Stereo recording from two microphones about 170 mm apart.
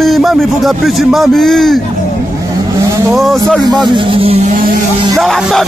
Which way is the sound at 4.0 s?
30° right (ahead or behind).